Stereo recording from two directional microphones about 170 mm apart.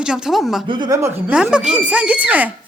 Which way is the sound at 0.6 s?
25° right (ahead or behind).